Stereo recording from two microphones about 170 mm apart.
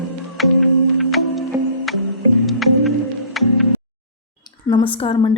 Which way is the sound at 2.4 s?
Centre (ahead or behind).